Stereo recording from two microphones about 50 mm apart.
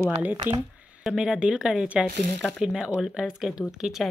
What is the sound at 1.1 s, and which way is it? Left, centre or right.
Speech, centre.